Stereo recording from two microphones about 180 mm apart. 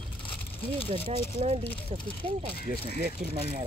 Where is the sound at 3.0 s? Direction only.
55° right (ahead or behind).